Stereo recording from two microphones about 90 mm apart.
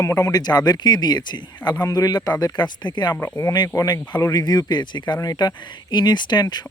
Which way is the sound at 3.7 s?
40° left (ahead or behind).